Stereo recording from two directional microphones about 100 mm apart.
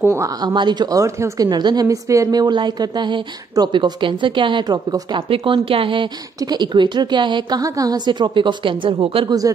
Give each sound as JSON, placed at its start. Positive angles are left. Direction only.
{"t": 0.0, "sound": "speech", "side_deg": -25}
{"t": 0.3, "sound": "a woman's voice", "side_deg": -45}
{"t": 1.5, "sound": "a woman's voice", "side_deg": -45}
{"t": 1.9, "sound": "a woman's voice", "side_deg": -35}
{"t": 6.4, "sound": "a woman's voice", "side_deg": -45}